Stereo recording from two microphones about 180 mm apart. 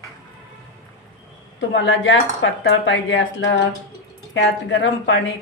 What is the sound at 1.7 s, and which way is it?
A woman's voice, 90° left.